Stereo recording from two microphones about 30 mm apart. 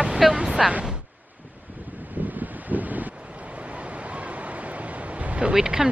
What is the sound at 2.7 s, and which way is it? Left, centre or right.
Wind, right.